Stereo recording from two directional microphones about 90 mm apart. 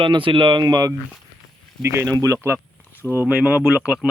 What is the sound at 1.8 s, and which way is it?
Speech, 30° right (ahead or behind).